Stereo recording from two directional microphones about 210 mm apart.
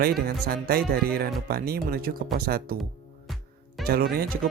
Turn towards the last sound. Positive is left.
turn(degrees=-45)  # may be behind; listen again after turning